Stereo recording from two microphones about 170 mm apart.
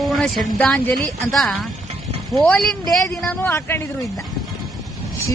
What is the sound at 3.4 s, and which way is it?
Speech, 15° left (ahead or behind).